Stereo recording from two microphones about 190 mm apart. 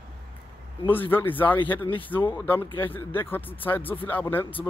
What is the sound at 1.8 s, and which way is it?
Speech, 30° left (ahead or behind).